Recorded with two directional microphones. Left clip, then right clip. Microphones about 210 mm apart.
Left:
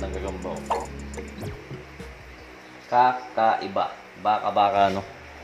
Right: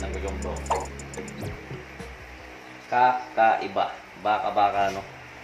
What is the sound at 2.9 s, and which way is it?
Speech, 30° left (ahead or behind).